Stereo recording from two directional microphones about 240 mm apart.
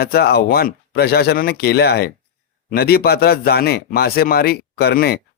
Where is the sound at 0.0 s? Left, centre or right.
Left.